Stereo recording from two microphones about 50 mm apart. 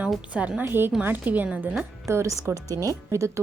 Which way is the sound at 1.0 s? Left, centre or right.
Right.